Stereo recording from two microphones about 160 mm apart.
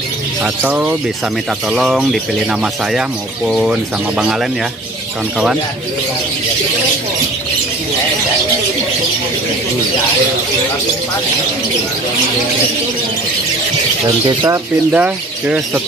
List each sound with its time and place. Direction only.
0.4 s speech: 10° right (ahead or behind)
14.2 s speech: 30° right (ahead or behind)
14.9 s speech: 10° right (ahead or behind)